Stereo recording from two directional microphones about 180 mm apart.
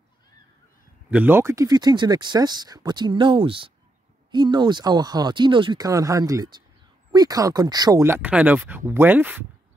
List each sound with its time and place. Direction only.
1.1 s speech: 10° right (ahead or behind)